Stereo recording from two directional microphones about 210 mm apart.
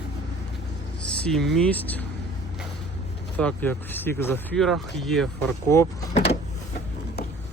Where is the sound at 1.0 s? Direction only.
5° left (ahead or behind).